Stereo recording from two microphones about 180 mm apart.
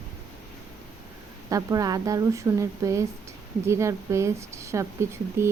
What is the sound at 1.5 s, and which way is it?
Speech, 20° right (ahead or behind).